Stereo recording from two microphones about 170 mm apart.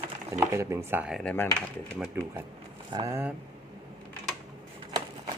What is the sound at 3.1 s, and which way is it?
Speech, 15° right (ahead or behind).